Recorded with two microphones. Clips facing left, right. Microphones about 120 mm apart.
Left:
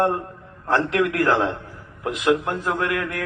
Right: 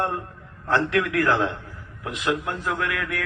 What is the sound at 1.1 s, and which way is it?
Speech, 35° left (ahead or behind).